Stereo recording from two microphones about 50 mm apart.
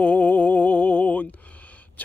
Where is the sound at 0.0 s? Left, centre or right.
Left.